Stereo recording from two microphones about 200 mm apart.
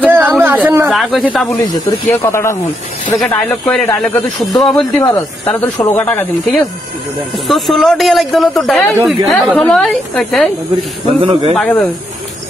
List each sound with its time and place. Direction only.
0.1 s a sound: 10° right (ahead or behind)
0.7 s snake: 10° right (ahead or behind)
1.6 s speech: 20° left (ahead or behind); by 5.0 s centre (ahead or behind)
5.0 s speech: 15° left (ahead or behind)
11.1 s speech: 30° right (ahead or behind)
11.5 s speech: 10° left (ahead or behind)